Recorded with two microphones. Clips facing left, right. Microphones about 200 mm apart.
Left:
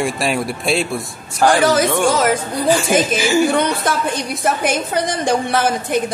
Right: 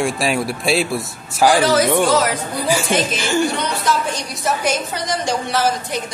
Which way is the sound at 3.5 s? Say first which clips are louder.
Left 3 dB; 55° left (ahead or behind).